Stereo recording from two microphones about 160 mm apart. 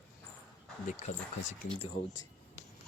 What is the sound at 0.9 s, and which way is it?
Speech, 50° left (ahead or behind).